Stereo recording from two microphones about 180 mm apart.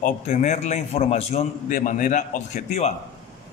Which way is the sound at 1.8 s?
45° left (ahead or behind).